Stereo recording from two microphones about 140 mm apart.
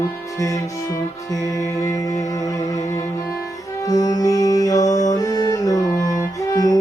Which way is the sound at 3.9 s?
25° left (ahead or behind).